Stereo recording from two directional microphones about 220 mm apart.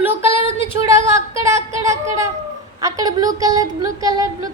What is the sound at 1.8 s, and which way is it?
Speech, 15° right (ahead or behind).